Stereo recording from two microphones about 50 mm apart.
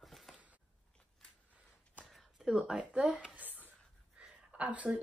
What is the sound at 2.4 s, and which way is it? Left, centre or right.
Speech, centre.